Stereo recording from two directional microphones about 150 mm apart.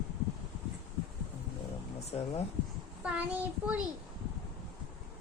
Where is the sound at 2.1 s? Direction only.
45° left (ahead or behind).